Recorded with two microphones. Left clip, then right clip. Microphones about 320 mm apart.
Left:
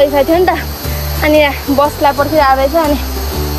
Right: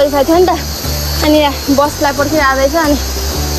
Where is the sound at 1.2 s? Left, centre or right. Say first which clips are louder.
Left 1 dB; centre.